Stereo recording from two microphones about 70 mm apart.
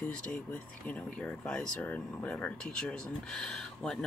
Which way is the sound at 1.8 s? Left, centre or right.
Left.